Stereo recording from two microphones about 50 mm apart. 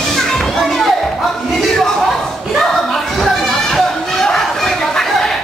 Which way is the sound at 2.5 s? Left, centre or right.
Centre.